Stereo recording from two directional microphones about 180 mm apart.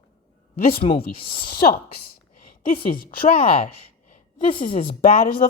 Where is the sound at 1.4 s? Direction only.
55° left (ahead or behind).